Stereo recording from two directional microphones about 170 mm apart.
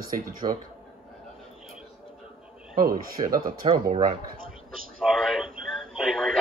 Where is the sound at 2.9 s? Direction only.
55° right (ahead or behind).